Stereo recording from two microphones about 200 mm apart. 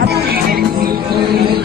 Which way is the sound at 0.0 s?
50° right (ahead or behind).